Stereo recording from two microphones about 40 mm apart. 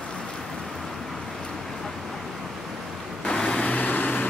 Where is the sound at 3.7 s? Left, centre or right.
Left.